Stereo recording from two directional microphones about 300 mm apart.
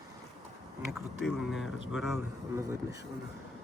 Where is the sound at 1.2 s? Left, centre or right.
Centre.